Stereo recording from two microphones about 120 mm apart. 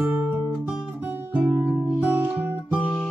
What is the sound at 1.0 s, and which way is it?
Music, 15° right (ahead or behind).